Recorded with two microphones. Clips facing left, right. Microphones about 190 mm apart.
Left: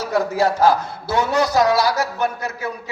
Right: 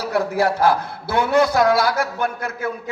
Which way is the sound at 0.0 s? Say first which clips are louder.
Left 1 dB; 60° right (ahead or behind).